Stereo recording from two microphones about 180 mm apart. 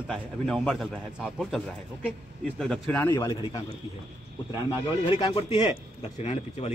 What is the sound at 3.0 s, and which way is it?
Speech, 25° left (ahead or behind).